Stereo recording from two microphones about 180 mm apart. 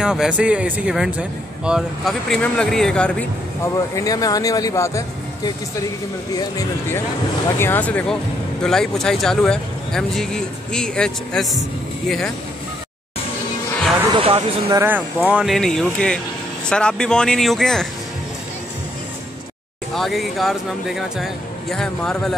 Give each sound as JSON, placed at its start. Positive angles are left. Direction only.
{"t": 0.0, "sound": "speech", "side_deg": -5}
{"t": 14.1, "sound": "speech", "side_deg": -30}
{"t": 14.8, "sound": "speech", "side_deg": -10}
{"t": 19.9, "sound": "speech", "side_deg": 0}